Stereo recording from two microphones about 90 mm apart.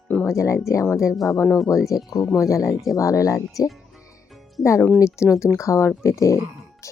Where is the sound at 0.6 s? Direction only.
30° left (ahead or behind).